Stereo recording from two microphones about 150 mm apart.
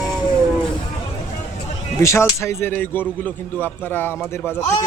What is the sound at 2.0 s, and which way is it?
A man's voice, 20° left (ahead or behind).